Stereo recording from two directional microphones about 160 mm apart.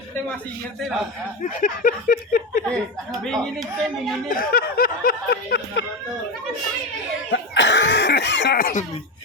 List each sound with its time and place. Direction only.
0.8 s speech: centre (ahead or behind)
1.4 s a sound: 55° left (ahead or behind)
2.6 s speech: 5° left (ahead or behind)
4.3 s speech: 65° left (ahead or behind); by 5.8 s 85° left
7.3 s cough: 90° left; by 8.8 s 65° left (ahead or behind)